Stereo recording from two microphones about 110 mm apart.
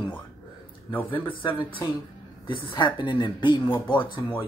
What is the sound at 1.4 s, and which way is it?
Speech, 45° left (ahead or behind).